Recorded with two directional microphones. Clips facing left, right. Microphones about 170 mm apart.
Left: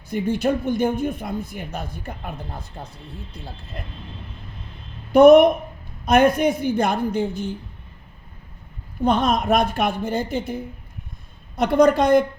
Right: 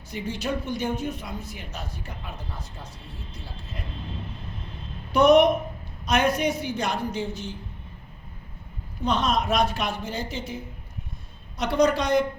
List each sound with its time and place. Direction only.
0.1 s speech: 55° left (ahead or behind)
5.1 s a woman's voice: 55° left (ahead or behind)
9.0 s a woman's voice: 55° left (ahead or behind)